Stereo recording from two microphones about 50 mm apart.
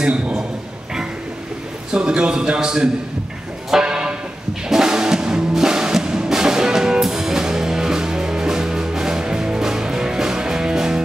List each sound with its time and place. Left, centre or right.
0.0 s a man's voice: right
1.9 s a man's voice: centre
3.8 s a sound: centre
4.6 s music: centre